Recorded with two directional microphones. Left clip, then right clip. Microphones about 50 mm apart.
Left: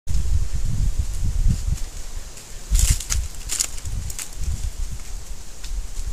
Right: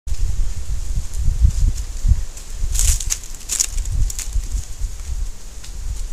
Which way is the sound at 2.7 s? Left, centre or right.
Left.